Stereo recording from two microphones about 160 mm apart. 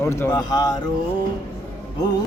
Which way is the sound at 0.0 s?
15° left (ahead or behind).